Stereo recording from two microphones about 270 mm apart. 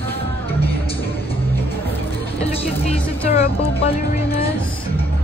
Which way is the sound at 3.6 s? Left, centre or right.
Left.